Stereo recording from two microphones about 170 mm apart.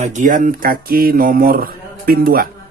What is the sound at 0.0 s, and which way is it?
Speech, 45° right (ahead or behind).